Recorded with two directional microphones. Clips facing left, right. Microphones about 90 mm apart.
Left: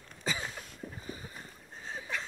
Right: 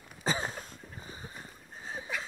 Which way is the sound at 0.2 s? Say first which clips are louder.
Right 4 dB; 35° right (ahead or behind).